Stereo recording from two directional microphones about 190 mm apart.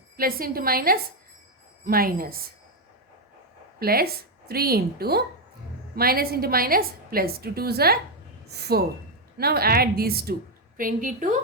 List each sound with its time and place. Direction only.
0.2 s a woman's voice: 50° right (ahead or behind)
3.8 s a woman's voice: 50° right (ahead or behind)